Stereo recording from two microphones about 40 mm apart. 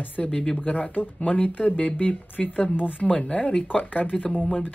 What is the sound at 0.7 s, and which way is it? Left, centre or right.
Speech, left.